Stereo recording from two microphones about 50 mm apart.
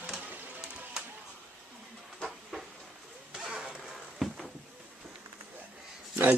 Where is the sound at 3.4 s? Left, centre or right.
Centre.